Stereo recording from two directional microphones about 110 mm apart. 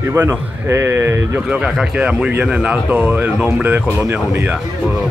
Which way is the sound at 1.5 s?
10° right (ahead or behind).